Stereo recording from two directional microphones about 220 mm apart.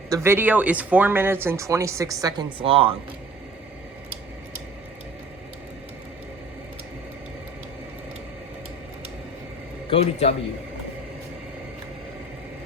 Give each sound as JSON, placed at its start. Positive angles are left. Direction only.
{"t": 0.1, "sound": "speech", "side_deg": -10}
{"t": 9.9, "sound": "a man's voice", "side_deg": 25}